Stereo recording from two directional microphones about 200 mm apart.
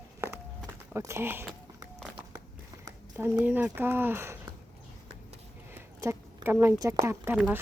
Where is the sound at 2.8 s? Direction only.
10° right (ahead or behind).